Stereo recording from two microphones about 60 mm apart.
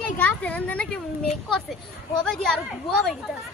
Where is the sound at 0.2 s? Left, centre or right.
Left.